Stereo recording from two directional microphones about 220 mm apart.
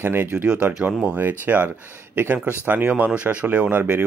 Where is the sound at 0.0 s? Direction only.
10° right (ahead or behind).